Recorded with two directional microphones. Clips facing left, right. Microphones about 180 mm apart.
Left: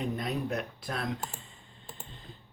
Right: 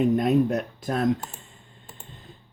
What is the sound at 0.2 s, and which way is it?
Speech, 45° right (ahead or behind).